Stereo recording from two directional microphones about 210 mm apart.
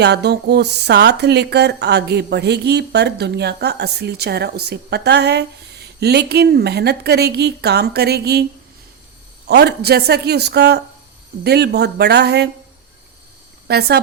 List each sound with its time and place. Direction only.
0.0 s speech: 50° right (ahead or behind)
9.5 s speech: 55° right (ahead or behind)
13.7 s speech: 50° right (ahead or behind)